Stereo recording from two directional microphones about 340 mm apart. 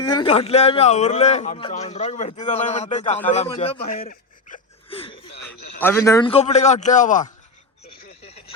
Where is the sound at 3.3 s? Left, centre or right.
Centre.